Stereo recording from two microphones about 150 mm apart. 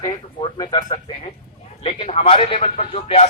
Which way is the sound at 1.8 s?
40° left (ahead or behind).